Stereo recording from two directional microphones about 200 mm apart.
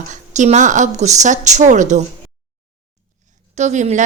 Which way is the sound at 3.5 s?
35° right (ahead or behind).